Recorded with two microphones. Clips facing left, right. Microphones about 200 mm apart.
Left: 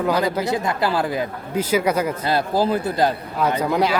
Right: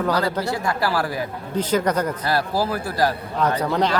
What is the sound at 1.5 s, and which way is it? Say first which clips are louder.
Speech: left 1 dB; 10° left (ahead or behind).